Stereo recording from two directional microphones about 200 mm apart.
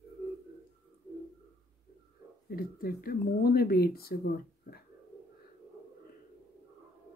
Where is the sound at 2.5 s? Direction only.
45° left (ahead or behind).